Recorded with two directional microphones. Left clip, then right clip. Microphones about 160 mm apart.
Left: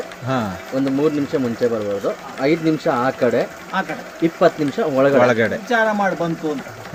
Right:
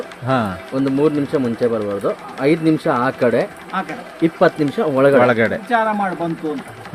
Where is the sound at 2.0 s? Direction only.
90° right.